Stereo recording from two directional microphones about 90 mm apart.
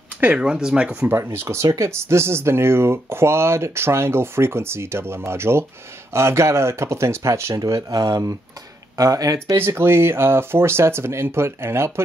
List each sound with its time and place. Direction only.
0.2 s speech: 15° right (ahead or behind)
1.1 s speech: 30° right (ahead or behind)
9.6 s speech: 25° right (ahead or behind)